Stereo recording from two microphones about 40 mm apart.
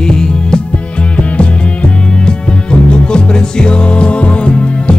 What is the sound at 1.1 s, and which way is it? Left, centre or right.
Music, left.